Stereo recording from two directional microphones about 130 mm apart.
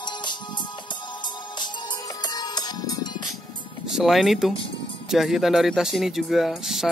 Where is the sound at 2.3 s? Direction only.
30° left (ahead or behind).